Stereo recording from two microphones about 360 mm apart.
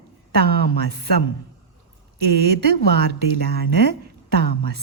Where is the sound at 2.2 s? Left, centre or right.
Right.